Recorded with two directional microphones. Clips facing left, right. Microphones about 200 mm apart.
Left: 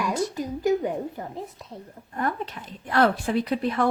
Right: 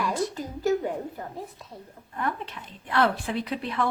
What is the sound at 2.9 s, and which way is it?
Speech, 45° left (ahead or behind).